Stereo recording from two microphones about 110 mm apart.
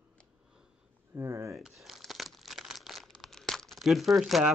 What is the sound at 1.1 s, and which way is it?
Speech, 25° right (ahead or behind).